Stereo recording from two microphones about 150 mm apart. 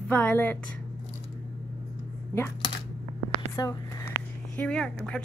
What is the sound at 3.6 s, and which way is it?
Speech, 25° left (ahead or behind).